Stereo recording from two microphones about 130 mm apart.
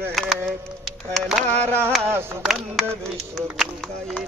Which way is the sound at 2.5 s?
5° right (ahead or behind).